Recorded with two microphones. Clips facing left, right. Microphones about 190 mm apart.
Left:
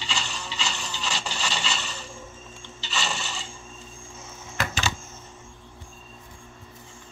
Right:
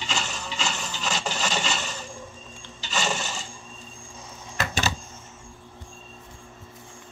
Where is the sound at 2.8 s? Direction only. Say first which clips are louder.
Right 3 dB; 45° right (ahead or behind).